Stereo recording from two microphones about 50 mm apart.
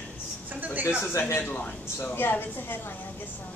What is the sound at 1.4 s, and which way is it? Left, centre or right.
Speech, left.